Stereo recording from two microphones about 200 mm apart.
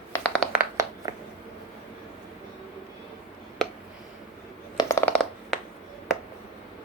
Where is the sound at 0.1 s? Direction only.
5° left (ahead or behind).